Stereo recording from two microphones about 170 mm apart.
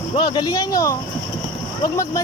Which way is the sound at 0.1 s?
30° left (ahead or behind).